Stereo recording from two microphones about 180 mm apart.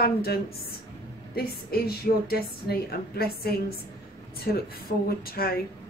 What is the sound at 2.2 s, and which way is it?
Speech, 60° left (ahead or behind).